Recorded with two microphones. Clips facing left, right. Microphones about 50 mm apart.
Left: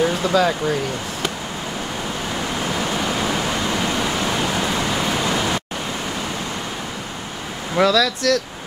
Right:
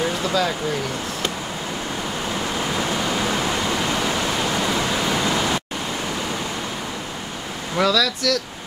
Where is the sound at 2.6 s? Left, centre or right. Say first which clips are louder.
Left 1 dB; centre.